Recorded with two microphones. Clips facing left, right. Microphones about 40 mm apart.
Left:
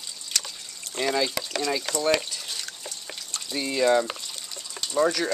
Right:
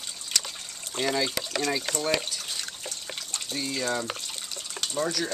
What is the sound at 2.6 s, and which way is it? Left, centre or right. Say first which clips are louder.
Drip: right 1 dB; right.